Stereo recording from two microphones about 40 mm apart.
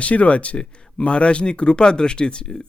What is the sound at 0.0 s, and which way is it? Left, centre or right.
Speech, left.